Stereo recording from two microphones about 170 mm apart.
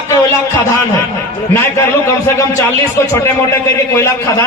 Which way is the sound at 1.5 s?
15° left (ahead or behind).